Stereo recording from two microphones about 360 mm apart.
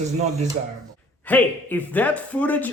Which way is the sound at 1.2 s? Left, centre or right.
Centre.